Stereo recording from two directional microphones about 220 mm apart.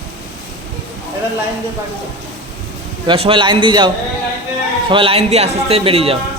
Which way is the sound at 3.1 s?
25° right (ahead or behind).